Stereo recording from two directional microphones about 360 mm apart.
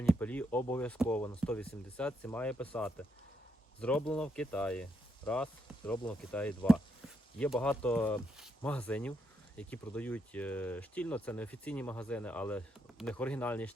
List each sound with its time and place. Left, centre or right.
0.0 s speech: centre